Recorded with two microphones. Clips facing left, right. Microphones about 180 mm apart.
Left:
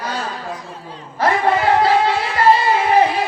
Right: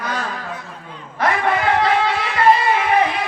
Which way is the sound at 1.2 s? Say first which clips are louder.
Left 2 dB; 30° left (ahead or behind).